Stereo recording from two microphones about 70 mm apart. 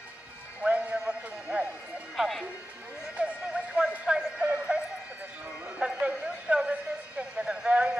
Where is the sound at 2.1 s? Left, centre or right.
Centre.